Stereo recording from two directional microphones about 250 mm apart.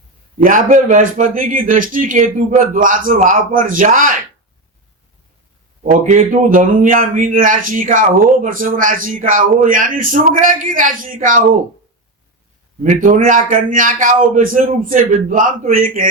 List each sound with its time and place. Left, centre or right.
0.4 s speech: right
5.8 s speech: right
12.8 s speech: right